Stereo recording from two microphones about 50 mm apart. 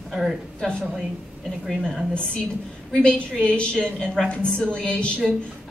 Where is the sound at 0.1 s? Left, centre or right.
Centre.